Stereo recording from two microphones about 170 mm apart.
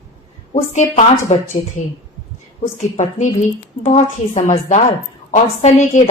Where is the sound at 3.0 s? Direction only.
45° left (ahead or behind).